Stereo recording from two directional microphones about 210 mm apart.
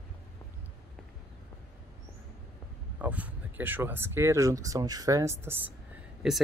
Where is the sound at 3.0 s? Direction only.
5° right (ahead or behind).